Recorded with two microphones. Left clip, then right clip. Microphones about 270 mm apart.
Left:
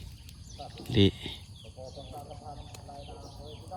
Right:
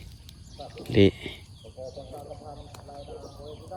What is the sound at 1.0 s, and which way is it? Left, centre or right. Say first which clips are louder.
Speech: right 5 dB; left.